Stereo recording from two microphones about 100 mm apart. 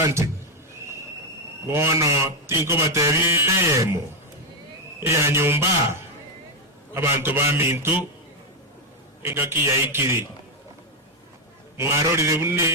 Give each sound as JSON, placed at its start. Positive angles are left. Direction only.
{"t": 0.0, "sound": "speech", "side_deg": -30}
{"t": 1.6, "sound": "speech", "side_deg": -25}
{"t": 9.2, "sound": "speech", "side_deg": -25}
{"t": 11.8, "sound": "speech", "side_deg": -30}